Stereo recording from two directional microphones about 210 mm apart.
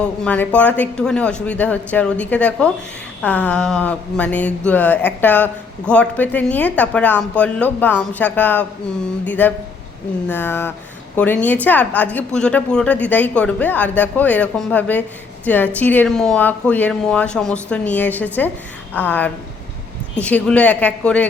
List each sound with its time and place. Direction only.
0.0 s a woman's voice: 5° left (ahead or behind)